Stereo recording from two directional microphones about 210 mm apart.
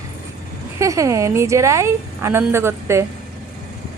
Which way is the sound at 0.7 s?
15° right (ahead or behind).